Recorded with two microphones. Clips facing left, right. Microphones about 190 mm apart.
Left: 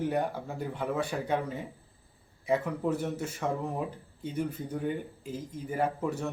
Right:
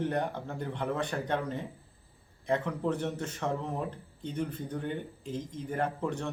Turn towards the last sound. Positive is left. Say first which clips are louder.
# left 2 dB
turn(degrees=5)  # may be behind; listen again after turning